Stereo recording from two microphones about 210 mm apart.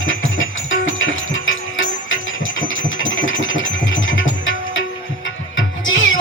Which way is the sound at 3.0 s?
65° left (ahead or behind).